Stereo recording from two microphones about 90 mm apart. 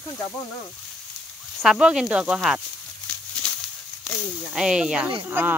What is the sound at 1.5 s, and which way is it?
Speech, 5° right (ahead or behind).